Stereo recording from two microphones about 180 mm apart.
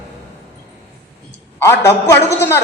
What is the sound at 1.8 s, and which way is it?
Speech, 15° left (ahead or behind).